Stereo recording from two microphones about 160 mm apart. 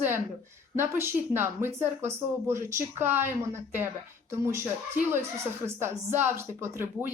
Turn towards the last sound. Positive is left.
turn(degrees=-15)  # may be behind; listen again after turning